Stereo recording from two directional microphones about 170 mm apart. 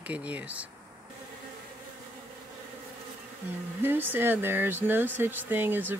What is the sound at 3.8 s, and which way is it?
Speech, 10° right (ahead or behind).